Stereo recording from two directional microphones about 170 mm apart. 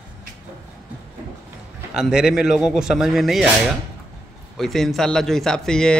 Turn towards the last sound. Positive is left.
turn(degrees=5)  # may be behind; listen again after turning